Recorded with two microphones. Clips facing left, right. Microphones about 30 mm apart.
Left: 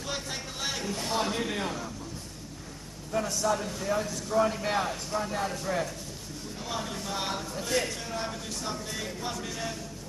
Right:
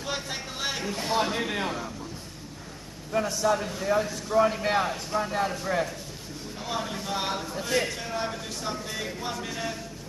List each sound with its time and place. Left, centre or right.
0.0 s a man's voice: centre
3.1 s a man's voice: centre